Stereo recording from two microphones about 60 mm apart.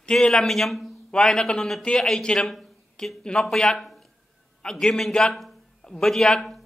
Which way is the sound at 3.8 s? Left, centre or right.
Centre.